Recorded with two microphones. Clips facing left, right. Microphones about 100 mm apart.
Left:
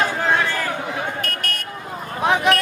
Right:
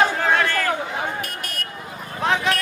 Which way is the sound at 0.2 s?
15° left (ahead or behind).